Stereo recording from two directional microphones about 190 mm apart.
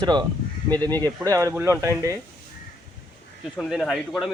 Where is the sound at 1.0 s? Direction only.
15° right (ahead or behind).